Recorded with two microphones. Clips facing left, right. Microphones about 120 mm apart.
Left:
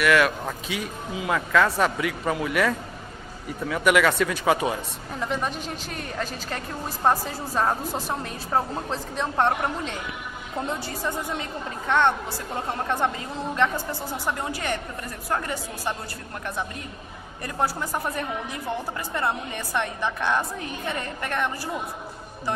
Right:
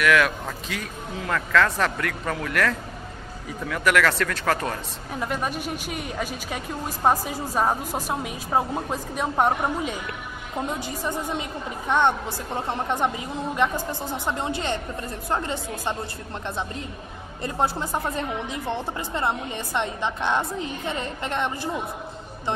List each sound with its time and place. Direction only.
0.0 s speech: centre (ahead or behind)
5.2 s a woman's voice: 5° right (ahead or behind)
10.6 s a woman's voice: 15° right (ahead or behind)
17.4 s a woman's voice: 25° right (ahead or behind)